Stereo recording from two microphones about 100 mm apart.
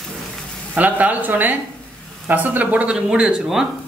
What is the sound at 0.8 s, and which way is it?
Speech, 15° right (ahead or behind).